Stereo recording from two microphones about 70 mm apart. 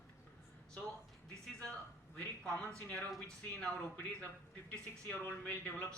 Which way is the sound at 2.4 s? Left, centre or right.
Centre.